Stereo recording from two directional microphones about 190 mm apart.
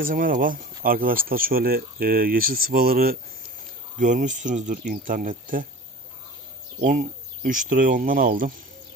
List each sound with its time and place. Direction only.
0.0 s speech: 45° right (ahead or behind)
6.8 s speech: 45° right (ahead or behind)